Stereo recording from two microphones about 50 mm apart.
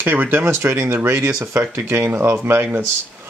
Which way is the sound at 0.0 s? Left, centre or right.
Right.